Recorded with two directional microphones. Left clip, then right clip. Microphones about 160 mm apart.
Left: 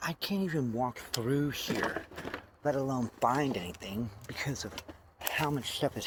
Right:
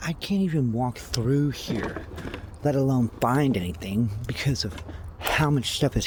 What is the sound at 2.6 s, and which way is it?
Speech, 65° right (ahead or behind).